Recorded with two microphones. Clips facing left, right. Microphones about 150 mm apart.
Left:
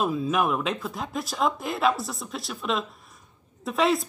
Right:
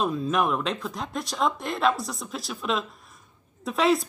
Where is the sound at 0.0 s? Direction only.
5° left (ahead or behind).